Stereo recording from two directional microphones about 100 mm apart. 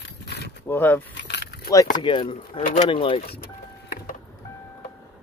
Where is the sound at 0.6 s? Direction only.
20° left (ahead or behind).